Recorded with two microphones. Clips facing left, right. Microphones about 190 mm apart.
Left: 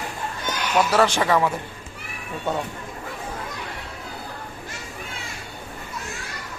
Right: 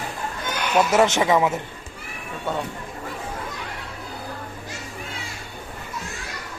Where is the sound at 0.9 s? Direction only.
20° right (ahead or behind).